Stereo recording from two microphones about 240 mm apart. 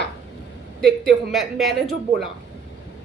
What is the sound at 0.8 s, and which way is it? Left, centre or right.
A woman's voice, centre.